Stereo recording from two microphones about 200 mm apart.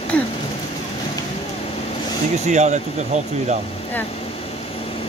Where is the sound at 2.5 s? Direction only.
35° right (ahead or behind).